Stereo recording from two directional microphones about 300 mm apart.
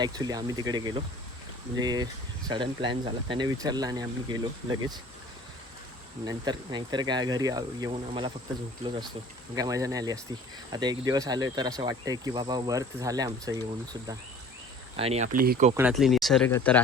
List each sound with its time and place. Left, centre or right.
0.0 s speech: centre
6.2 s speech: centre
14.9 s speech: centre
15.7 s speech: centre